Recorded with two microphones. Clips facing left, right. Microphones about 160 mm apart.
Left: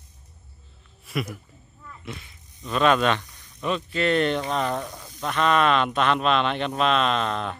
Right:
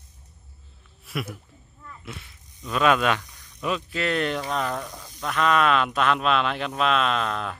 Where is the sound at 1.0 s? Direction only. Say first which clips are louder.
Left 2 dB; centre (ahead or behind).